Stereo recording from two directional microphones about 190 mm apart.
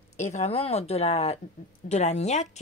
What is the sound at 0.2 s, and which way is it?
Speech, 35° left (ahead or behind).